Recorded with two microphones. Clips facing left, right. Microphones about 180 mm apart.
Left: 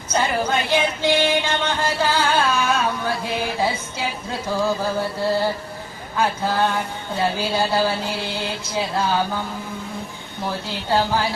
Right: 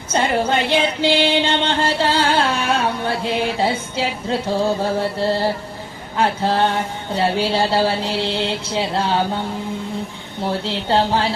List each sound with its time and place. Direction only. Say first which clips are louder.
0.1 s child singing: right 3 dB; 25° right (ahead or behind)
1.1 s music: right 2 dB; 30° right (ahead or behind)
6.1 s speech: right 3 dB; 30° right (ahead or behind)
10.4 s speech: right 5 dB; 30° right (ahead or behind)